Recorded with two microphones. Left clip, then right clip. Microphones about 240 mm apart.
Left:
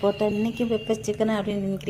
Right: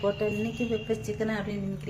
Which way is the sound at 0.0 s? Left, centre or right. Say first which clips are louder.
Left 5 dB; left.